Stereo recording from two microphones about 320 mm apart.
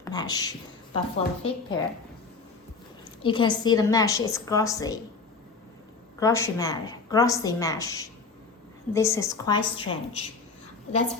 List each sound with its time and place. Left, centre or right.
0.0 s a woman's voice: centre
3.2 s a woman's voice: centre
6.1 s a woman's voice: centre